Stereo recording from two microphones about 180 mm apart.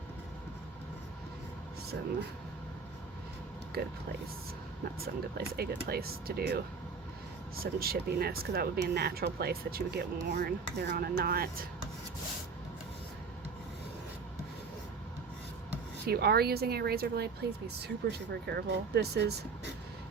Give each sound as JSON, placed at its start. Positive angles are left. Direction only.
{"t": 5.5, "sound": "speech", "side_deg": -60}
{"t": 16.0, "sound": "speech", "side_deg": -60}